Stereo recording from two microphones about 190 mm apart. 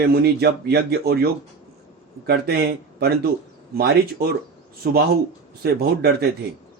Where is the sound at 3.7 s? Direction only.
55° right (ahead or behind).